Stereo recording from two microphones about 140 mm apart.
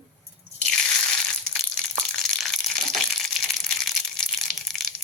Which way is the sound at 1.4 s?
5° left (ahead or behind).